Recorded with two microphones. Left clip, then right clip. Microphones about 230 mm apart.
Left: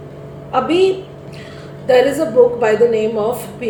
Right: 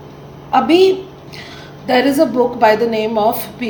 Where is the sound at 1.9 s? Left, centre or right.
Right.